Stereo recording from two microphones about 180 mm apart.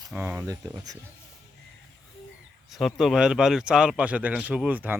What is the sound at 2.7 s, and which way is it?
Speech, centre (ahead or behind).